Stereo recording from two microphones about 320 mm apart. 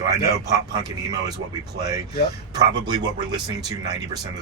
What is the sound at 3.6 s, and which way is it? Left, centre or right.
Speech, centre.